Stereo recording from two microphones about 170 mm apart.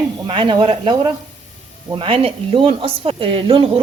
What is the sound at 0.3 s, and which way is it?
A woman's voice, 30° right (ahead or behind).